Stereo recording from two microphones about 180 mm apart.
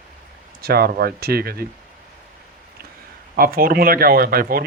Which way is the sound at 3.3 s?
55° right (ahead or behind).